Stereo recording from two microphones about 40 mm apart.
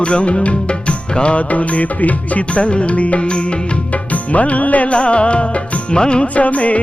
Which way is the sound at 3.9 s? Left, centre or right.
Left.